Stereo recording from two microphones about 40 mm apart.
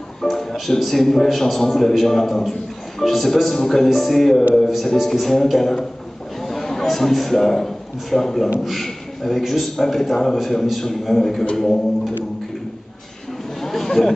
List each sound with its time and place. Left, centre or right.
0.2 s a man's voice: centre
13.6 s chatter: centre